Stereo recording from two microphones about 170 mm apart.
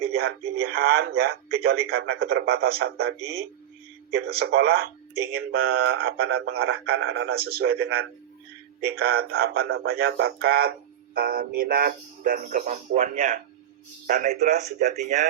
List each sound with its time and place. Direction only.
0.0 s speech: 65° right (ahead or behind)
4.3 s speech: 65° right (ahead or behind)
14.8 s speech: 45° right (ahead or behind)